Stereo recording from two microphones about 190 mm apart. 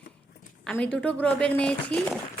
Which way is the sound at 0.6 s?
5° left (ahead or behind).